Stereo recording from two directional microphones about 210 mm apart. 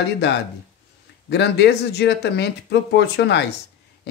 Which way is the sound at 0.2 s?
55° left (ahead or behind).